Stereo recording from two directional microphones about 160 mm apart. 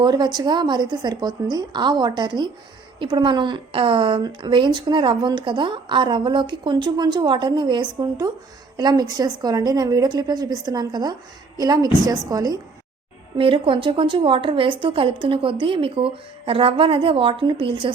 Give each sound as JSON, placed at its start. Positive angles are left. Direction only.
{"t": 0.0, "sound": "a woman's voice", "side_deg": -25}